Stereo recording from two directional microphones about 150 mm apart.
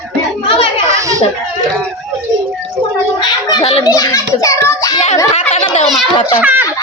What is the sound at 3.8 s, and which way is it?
A child's voice, 25° left (ahead or behind).